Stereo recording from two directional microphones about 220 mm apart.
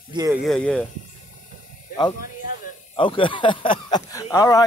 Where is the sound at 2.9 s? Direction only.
20° left (ahead or behind).